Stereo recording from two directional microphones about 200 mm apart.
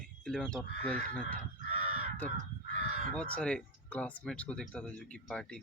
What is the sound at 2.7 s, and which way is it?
Crow, 35° right (ahead or behind).